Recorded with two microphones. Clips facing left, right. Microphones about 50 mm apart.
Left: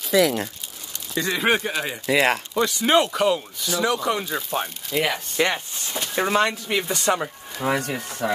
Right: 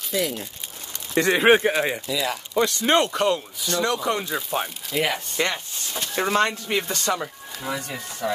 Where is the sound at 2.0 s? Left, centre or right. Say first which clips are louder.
Left 7 dB; left.